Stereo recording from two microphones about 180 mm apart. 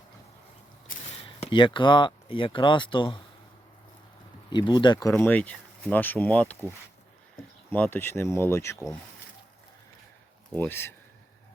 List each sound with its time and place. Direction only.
1.2 s speech: 30° left (ahead or behind)
4.5 s speech: 25° left (ahead or behind)
5.1 s speech: 10° left (ahead or behind)
10.5 s speech: 10° left (ahead or behind)